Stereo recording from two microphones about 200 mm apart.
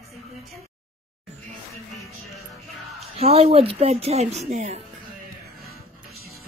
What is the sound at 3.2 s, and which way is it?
Speech, 30° right (ahead or behind).